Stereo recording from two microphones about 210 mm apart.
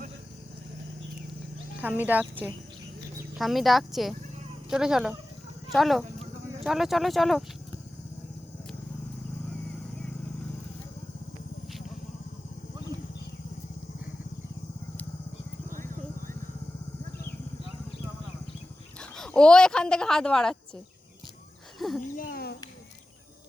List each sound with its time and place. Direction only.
1.8 s speech: 10° right (ahead or behind)
3.3 s speech: centre (ahead or behind)
15.7 s vehicle: 40° right (ahead or behind)
18.9 s speech: 5° left (ahead or behind)
21.8 s speech: centre (ahead or behind)
22.1 s a sound: 45° left (ahead or behind)